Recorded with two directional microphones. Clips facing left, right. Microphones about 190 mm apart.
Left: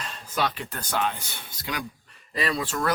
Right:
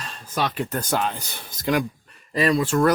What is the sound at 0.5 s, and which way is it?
Speech, 45° right (ahead or behind).